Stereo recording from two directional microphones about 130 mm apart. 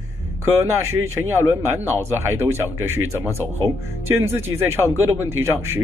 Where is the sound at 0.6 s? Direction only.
20° right (ahead or behind).